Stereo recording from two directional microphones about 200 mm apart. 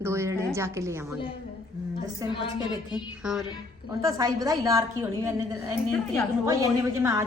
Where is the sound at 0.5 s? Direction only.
15° right (ahead or behind).